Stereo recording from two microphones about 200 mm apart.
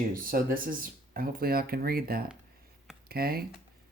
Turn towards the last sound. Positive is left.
turn(degrees=-50)  # may be behind; listen again after turning